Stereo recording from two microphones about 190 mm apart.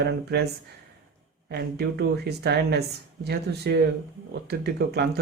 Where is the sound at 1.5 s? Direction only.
60° right (ahead or behind).